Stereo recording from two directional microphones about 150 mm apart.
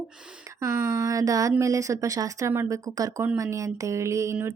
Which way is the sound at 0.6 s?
20° right (ahead or behind).